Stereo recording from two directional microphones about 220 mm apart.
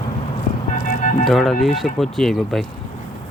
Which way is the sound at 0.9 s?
35° left (ahead or behind).